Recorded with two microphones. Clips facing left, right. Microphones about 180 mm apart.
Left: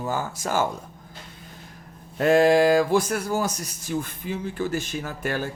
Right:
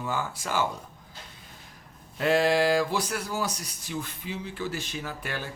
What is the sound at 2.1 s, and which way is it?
Speech, 45° left (ahead or behind).